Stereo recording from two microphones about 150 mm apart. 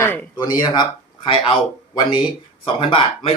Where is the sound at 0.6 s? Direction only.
30° left (ahead or behind).